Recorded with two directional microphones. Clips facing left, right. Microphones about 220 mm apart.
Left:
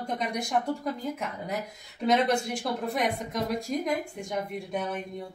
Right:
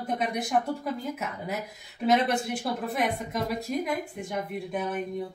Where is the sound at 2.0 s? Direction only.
5° right (ahead or behind).